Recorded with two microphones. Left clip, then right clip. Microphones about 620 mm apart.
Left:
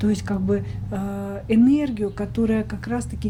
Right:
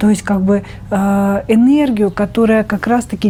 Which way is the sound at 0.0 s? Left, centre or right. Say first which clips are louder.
Right 10 dB; right.